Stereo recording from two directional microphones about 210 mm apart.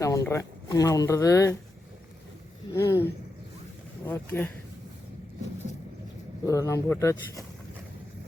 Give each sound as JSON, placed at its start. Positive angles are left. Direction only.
{"t": 0.0, "sound": "speech", "side_deg": 15}
{"t": 2.7, "sound": "speech", "side_deg": 15}
{"t": 4.0, "sound": "speech", "side_deg": 10}
{"t": 6.4, "sound": "speech", "side_deg": 15}